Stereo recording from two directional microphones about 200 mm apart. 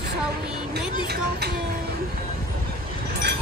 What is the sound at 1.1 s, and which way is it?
Speech, 55° right (ahead or behind).